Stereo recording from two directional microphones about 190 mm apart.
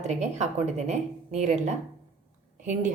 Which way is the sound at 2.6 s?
40° right (ahead or behind).